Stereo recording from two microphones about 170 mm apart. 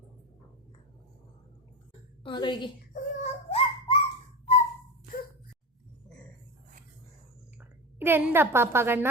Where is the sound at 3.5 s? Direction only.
30° left (ahead or behind).